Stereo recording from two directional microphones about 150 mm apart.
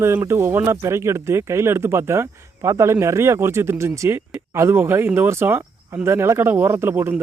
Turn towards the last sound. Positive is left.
turn(degrees=-15)  # may be behind; listen again after turning